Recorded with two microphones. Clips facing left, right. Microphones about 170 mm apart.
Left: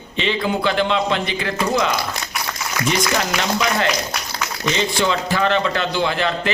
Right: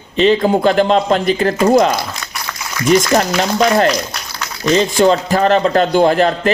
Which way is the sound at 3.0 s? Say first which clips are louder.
Right 7 dB; 40° right (ahead or behind).